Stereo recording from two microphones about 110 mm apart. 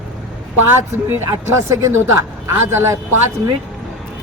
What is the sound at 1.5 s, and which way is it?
Speech, 25° right (ahead or behind).